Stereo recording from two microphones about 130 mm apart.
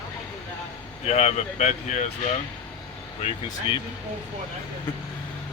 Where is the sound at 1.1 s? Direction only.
55° left (ahead or behind).